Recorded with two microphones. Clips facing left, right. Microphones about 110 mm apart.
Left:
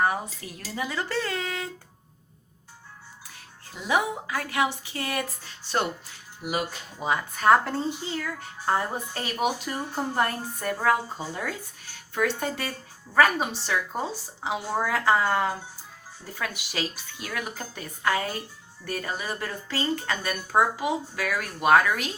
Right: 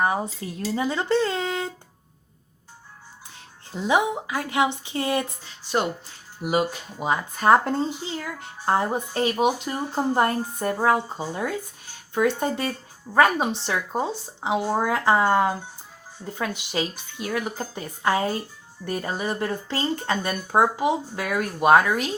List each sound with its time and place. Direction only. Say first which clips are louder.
0.0 s speech: right 2 dB; 25° right (ahead or behind)
3.3 s speech: right 9 dB; 25° right (ahead or behind)
6.4 s speech: right 6 dB; 45° right (ahead or behind)
7.0 s speech: right 2 dB; 15° right (ahead or behind)
7.3 s speech: right 2 dB; 25° right (ahead or behind)